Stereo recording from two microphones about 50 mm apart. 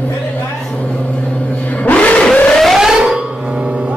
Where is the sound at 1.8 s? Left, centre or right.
Left.